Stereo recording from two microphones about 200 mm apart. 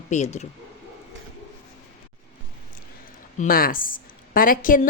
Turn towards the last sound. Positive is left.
turn(degrees=45)  # may be behind; listen again after turning